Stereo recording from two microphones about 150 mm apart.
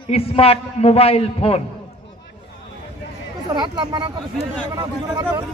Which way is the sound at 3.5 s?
30° right (ahead or behind).